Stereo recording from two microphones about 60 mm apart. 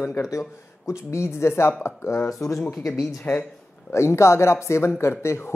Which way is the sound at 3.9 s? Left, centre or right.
Left.